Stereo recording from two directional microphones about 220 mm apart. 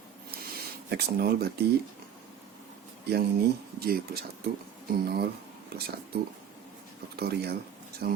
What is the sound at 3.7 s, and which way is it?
Speech, 45° right (ahead or behind).